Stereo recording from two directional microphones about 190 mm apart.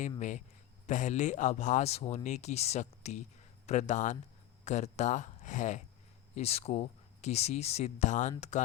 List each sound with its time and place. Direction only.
0.2 s speech: 40° left (ahead or behind)